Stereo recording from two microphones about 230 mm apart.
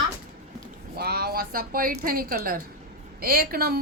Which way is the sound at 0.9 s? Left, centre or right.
Right.